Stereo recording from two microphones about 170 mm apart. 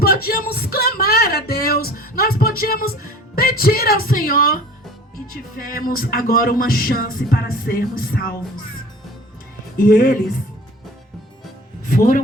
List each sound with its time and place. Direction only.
0.0 s a sound: 65° left (ahead or behind)
5.3 s music: 60° left (ahead or behind)
9.7 s music: 55° left (ahead or behind)
11.9 s music: 55° left (ahead or behind)